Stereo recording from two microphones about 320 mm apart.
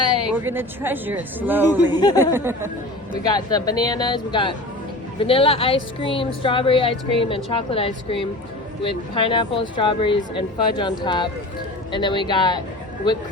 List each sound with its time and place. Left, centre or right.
0.3 s a woman's voice: centre
1.9 s speech: centre
2.3 s speech: centre
3.2 s speech: centre